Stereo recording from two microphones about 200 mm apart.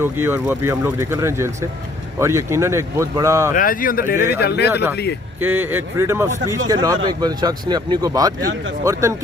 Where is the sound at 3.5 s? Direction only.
45° left (ahead or behind).